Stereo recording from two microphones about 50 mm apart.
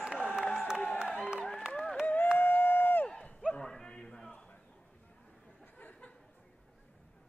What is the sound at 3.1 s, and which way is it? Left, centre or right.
Run, left.